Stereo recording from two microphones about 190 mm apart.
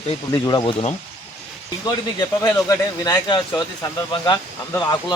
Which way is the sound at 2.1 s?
20° left (ahead or behind).